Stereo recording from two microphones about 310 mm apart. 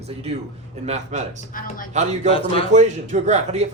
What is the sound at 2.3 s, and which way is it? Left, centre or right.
Speech, centre.